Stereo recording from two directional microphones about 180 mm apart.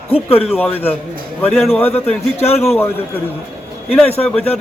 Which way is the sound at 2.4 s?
35° left (ahead or behind).